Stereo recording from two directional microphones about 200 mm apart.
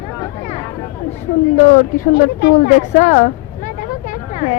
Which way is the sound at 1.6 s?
40° left (ahead or behind).